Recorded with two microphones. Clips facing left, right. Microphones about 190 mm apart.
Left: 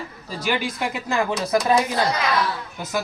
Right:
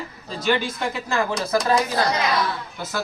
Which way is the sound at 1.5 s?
25° left (ahead or behind).